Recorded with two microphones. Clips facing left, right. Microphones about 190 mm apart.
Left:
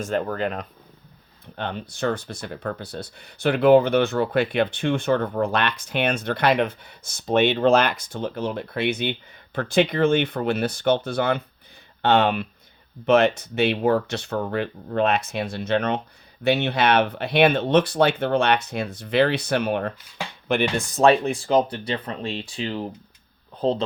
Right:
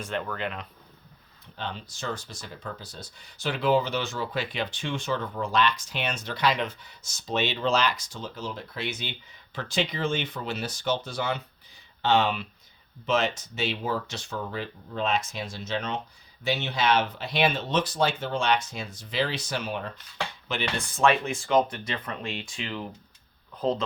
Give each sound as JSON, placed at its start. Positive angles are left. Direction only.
{"t": 0.0, "sound": "speech", "side_deg": 40}
{"t": 1.5, "sound": "speech", "side_deg": 60}
{"t": 20.5, "sound": "speech", "side_deg": 50}